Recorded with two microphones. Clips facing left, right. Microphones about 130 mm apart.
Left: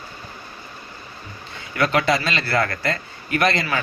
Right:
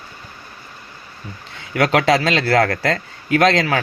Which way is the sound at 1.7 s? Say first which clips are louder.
Right 4 dB; 90° right.